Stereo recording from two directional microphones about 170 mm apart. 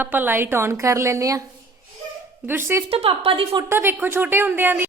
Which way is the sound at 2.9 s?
35° right (ahead or behind).